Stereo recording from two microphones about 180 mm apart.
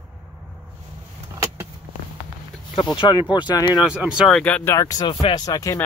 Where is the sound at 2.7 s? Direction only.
25° left (ahead or behind).